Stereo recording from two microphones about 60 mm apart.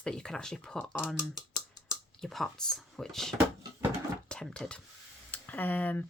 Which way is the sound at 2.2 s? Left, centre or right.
Centre.